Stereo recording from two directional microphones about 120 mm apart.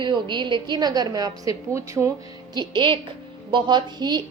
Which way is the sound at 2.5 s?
40° right (ahead or behind).